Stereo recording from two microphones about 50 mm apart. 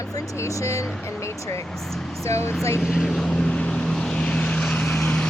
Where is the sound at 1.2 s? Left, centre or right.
Left.